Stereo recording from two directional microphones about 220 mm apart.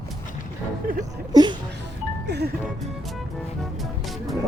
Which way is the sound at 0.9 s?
40° right (ahead or behind).